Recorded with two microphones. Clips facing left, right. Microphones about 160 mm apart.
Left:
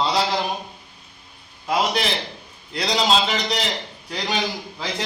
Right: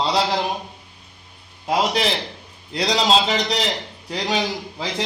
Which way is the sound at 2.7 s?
35° right (ahead or behind).